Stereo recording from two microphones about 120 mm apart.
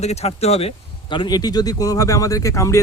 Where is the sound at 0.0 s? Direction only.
65° left (ahead or behind).